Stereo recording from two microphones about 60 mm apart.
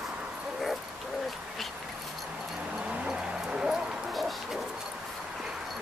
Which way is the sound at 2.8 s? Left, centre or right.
Centre.